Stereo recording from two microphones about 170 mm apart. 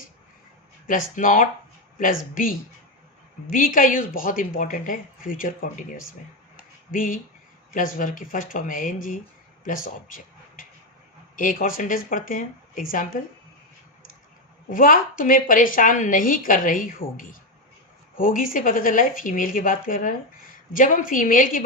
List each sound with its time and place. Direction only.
0.9 s a woman's voice: 50° left (ahead or behind)
6.9 s a woman's voice: 55° left (ahead or behind)
11.3 s a woman's voice: 50° left (ahead or behind)
14.7 s a woman's voice: 55° left (ahead or behind)